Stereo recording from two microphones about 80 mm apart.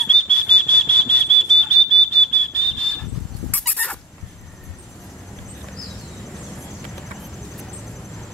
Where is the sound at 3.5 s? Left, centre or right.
Centre.